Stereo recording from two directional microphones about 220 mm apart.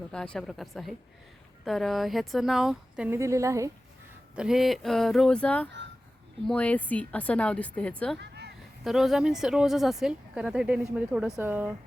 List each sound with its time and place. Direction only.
0.1 s speech: 5° left (ahead or behind); by 3.7 s 15° right (ahead or behind)
4.4 s speech: centre (ahead or behind)
8.2 s a sound: 50° right (ahead or behind)
8.8 s speech: centre (ahead or behind)